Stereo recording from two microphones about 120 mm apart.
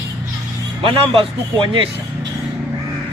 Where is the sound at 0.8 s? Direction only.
45° right (ahead or behind).